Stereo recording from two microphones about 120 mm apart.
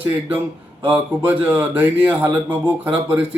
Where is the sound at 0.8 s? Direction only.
15° right (ahead or behind).